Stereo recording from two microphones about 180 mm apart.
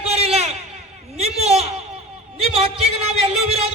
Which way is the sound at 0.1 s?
35° right (ahead or behind).